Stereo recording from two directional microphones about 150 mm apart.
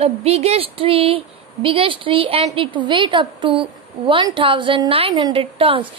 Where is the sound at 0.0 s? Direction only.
45° right (ahead or behind).